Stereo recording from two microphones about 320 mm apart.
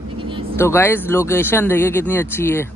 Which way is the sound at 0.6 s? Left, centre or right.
Centre.